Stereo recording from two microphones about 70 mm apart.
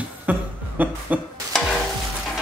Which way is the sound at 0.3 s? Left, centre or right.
Right.